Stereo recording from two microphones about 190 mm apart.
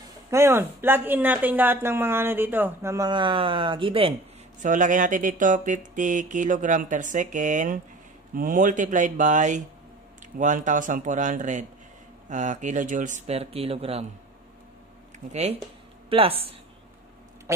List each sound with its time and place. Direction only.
0.3 s speech: 10° right (ahead or behind); by 4.1 s 25° right (ahead or behind)
4.6 s speech: 40° right (ahead or behind)
15.1 s speech: 35° right (ahead or behind)